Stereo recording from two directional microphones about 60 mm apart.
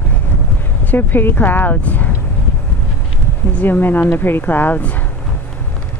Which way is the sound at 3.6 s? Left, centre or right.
Left.